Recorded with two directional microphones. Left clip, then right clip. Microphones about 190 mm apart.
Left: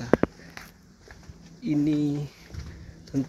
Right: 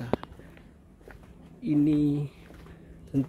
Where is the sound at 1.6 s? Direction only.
15° right (ahead or behind).